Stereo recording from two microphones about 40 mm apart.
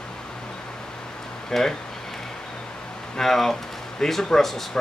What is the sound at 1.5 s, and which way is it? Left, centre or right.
Speech, centre.